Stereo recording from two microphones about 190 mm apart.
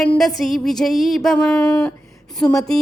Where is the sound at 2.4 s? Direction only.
5° left (ahead or behind).